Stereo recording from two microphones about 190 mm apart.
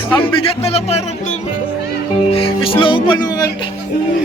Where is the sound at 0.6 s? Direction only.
35° left (ahead or behind).